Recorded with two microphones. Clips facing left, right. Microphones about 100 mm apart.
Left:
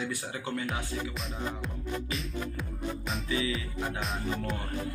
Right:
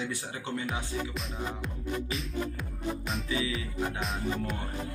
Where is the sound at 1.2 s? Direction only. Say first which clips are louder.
Even; centre (ahead or behind).